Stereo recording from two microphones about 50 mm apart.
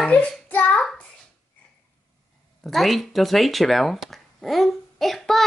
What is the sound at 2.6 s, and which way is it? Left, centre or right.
Speech, centre.